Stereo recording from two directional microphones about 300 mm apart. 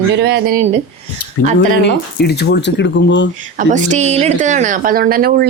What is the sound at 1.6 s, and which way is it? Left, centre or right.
Speech, left.